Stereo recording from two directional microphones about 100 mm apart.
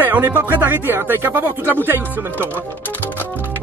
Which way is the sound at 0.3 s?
20° right (ahead or behind).